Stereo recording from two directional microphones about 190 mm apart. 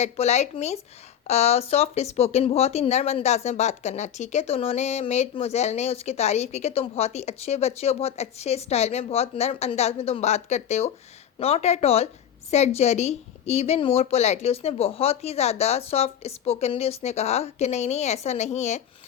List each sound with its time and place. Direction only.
0.0 s speech: 35° left (ahead or behind)